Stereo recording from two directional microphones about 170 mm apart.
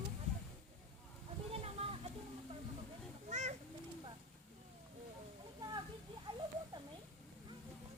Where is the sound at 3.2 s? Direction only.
40° right (ahead or behind).